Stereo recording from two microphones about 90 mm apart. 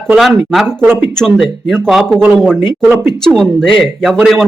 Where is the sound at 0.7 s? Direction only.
25° right (ahead or behind).